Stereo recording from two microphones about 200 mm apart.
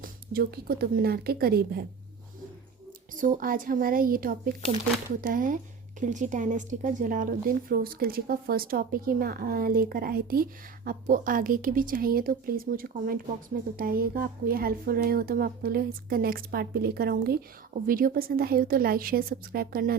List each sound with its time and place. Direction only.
0.0 s speech: 50° right (ahead or behind)
3.2 s speech: 40° right (ahead or behind)